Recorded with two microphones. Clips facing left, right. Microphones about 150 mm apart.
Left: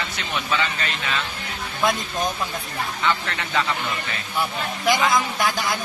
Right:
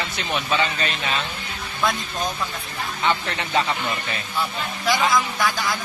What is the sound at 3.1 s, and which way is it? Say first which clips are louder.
Speech: right 5 dB; 25° right (ahead or behind).